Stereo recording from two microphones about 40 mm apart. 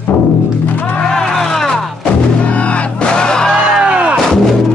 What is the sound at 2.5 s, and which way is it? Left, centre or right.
Music, left.